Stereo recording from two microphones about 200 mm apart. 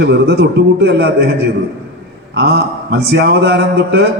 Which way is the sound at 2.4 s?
55° right (ahead or behind).